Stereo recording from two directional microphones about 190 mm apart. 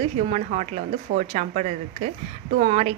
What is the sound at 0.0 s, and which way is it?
Speech, 35° right (ahead or behind).